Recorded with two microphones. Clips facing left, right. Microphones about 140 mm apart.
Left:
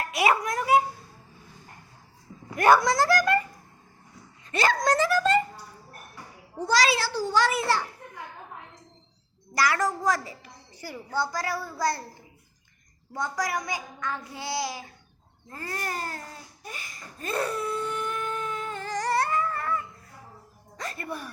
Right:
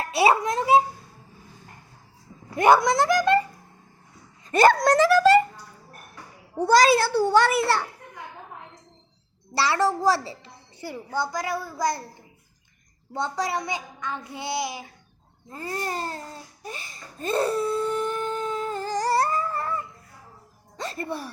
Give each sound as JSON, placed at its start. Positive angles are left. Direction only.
{"t": 0.0, "sound": "a woman's voice", "side_deg": -30}
{"t": 2.6, "sound": "a woman's voice", "side_deg": -20}
{"t": 4.5, "sound": "speech", "side_deg": -50}
{"t": 4.8, "sound": "speech", "side_deg": -70}
{"t": 6.6, "sound": "a child's voice", "side_deg": -50}
{"t": 9.6, "sound": "a woman's voice", "side_deg": -30}
{"t": 13.1, "sound": "a woman's voice", "side_deg": -25}
{"t": 15.4, "sound": "babbling", "side_deg": -20}
{"t": 20.7, "sound": "music", "side_deg": -30}